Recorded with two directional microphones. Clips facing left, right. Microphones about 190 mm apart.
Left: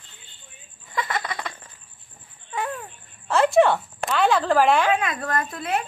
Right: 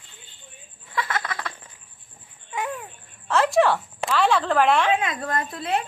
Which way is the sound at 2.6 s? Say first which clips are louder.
Even; 20° right (ahead or behind).